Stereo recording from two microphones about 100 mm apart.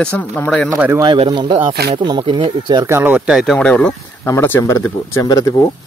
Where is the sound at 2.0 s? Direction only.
50° right (ahead or behind).